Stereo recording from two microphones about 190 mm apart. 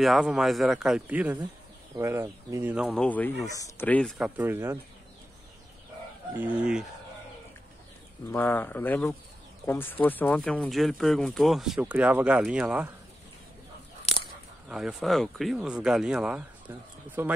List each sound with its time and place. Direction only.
0.0 s speech: centre (ahead or behind)
3.0 s speech: 10° left (ahead or behind)
4.2 s speech: 10° right (ahead or behind)
6.3 s speech: 10° right (ahead or behind)
8.3 s speech: 10° left (ahead or behind); by 12.9 s 5° right (ahead or behind)
14.0 s a sound: 30° left (ahead or behind)
14.7 s speech: centre (ahead or behind)